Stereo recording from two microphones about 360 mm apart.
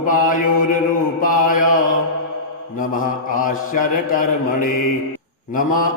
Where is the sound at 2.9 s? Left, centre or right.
Left.